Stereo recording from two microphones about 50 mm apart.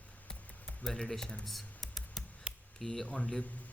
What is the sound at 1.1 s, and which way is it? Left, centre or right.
Speech, centre.